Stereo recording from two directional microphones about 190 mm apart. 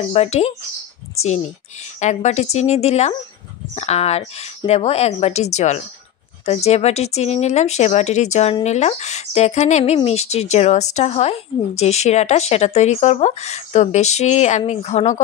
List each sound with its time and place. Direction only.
0.1 s speech: 35° left (ahead or behind)
2.0 s speech: 40° left (ahead or behind)